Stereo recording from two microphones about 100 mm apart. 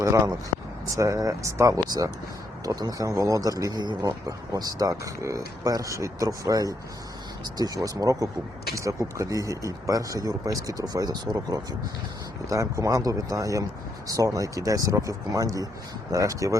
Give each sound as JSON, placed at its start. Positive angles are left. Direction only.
{"t": 0.0, "sound": "speech", "side_deg": -30}